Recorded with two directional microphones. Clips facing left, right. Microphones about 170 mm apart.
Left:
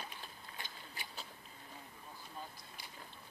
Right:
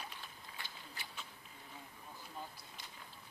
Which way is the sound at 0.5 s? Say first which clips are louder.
Left 1 dB; 15° left (ahead or behind).